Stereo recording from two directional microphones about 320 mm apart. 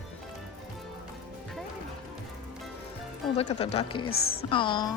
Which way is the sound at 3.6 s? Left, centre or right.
Centre.